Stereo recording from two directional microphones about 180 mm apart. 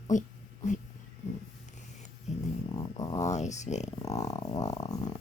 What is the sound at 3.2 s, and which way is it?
Speech, 40° left (ahead or behind).